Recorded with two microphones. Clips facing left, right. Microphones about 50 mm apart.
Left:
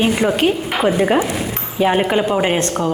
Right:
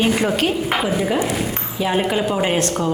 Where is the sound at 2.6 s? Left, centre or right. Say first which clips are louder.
Left 1 dB; left.